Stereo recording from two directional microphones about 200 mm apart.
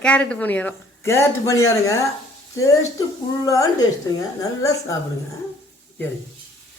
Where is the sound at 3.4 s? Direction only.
15° left (ahead or behind).